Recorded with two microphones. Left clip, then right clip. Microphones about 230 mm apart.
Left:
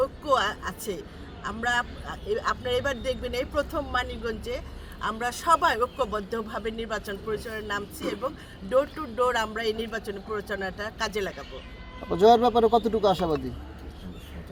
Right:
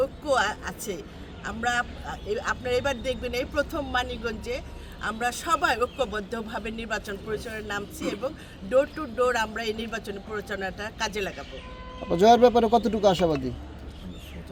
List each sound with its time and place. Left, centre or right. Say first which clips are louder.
0.0 s speech: even; centre
12.0 s speech: right 1 dB; right